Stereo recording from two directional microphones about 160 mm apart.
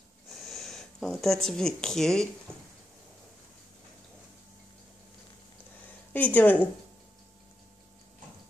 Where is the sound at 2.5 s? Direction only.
15° right (ahead or behind).